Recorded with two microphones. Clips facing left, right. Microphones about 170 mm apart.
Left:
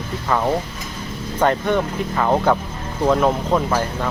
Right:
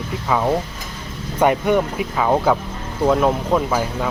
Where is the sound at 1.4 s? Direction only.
10° right (ahead or behind).